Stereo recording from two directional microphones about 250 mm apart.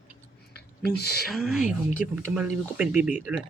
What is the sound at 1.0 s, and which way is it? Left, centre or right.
Speech, left.